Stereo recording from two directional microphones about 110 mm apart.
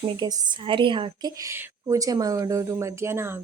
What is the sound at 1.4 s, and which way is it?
A woman's voice, 25° right (ahead or behind).